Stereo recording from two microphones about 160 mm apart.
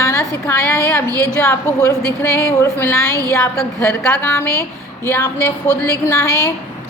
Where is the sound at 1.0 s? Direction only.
20° right (ahead or behind).